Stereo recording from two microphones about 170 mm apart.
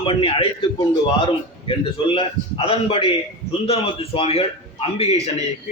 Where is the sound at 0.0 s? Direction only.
30° left (ahead or behind).